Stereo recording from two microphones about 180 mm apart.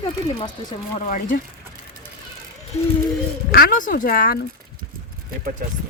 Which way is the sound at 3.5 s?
55° left (ahead or behind).